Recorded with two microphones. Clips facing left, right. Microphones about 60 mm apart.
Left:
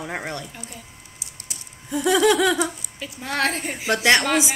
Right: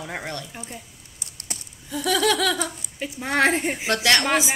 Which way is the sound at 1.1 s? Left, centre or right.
Right.